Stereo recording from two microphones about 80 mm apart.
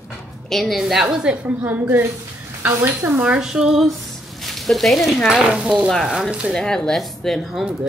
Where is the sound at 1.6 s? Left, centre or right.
Right.